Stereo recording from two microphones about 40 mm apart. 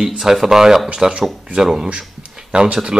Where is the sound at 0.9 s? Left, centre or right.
Right.